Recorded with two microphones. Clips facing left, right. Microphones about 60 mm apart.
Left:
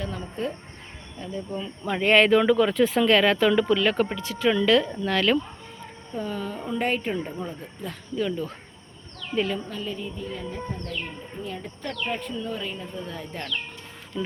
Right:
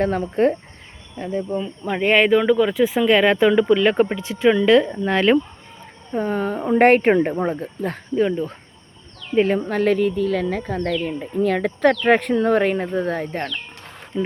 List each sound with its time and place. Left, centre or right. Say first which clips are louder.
0.0 s speech: right 12 dB; right
1.1 s speech: right 9 dB; right
1.5 s speech: right 5 dB; centre
6.1 s speech: right 9 dB; right
8.1 s speech: right 7 dB; right
9.6 s speech: right 14 dB; right
14.1 s speech: right 7 dB; right